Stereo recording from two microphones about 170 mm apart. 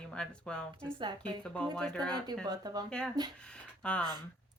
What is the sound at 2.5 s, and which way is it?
Speech, 25° right (ahead or behind).